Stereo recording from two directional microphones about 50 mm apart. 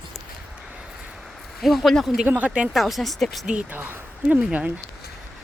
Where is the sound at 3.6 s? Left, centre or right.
Right.